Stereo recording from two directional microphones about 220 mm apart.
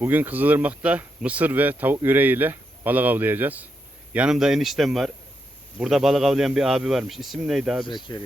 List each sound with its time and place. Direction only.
0.0 s speech: 10° right (ahead or behind)
7.9 s speech: 20° left (ahead or behind)